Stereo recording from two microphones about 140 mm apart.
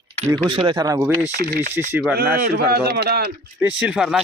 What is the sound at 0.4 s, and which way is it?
Speech, 35° right (ahead or behind).